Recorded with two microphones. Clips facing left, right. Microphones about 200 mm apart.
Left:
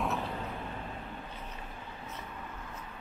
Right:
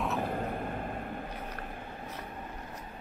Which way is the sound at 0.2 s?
50° right (ahead or behind).